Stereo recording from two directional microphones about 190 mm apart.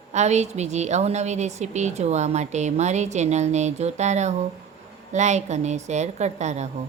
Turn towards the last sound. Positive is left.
turn(degrees=-35)  # may be behind; listen again after turning